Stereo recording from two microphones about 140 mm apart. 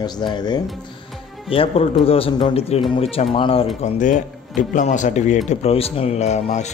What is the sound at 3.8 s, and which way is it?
Speech, 65° left (ahead or behind).